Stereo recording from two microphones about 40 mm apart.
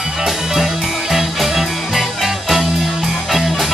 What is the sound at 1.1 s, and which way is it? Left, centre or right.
Music, centre.